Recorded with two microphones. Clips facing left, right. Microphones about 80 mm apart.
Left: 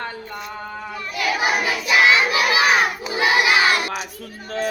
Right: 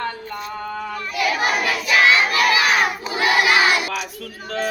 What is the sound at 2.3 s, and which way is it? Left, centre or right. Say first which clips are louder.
Crowd: right 2 dB; right.